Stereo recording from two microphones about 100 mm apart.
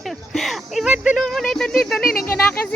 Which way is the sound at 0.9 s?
10° right (ahead or behind).